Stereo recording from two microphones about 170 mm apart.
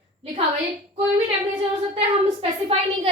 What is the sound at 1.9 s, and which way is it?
Speech, 35° right (ahead or behind).